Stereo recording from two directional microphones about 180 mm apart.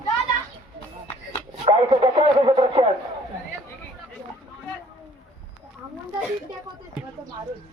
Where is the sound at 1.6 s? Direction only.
30° right (ahead or behind).